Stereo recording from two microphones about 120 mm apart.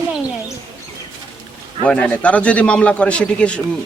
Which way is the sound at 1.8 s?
10° left (ahead or behind).